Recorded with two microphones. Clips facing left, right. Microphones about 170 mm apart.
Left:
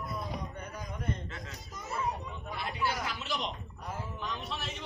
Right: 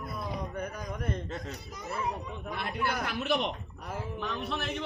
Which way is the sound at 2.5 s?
55° right (ahead or behind).